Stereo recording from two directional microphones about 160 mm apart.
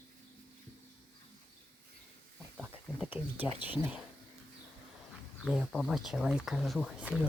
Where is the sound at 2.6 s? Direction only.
10° right (ahead or behind).